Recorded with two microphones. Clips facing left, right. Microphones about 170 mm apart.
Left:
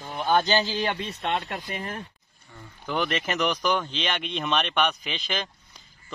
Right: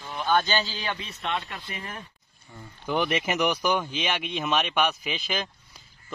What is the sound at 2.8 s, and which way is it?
Speech, 10° right (ahead or behind).